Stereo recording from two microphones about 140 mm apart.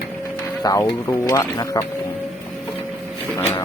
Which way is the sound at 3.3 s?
15° left (ahead or behind).